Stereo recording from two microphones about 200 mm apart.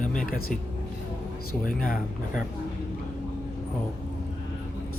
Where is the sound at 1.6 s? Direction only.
45° left (ahead or behind).